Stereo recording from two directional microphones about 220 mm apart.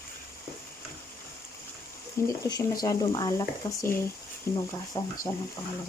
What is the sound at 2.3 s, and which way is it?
Speech, 15° left (ahead or behind).